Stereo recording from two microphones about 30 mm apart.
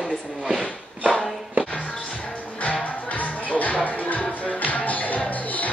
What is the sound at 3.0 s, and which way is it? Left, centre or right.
Music, left.